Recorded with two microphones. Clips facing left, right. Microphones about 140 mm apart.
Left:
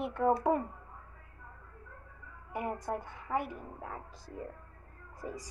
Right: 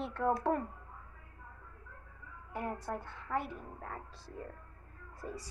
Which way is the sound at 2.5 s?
15° left (ahead or behind).